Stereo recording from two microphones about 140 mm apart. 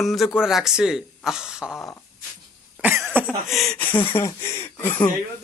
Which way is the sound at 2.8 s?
10° right (ahead or behind).